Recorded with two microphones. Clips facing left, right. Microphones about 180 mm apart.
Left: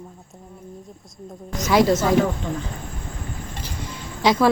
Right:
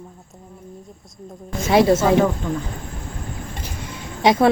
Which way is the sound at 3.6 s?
25° left (ahead or behind).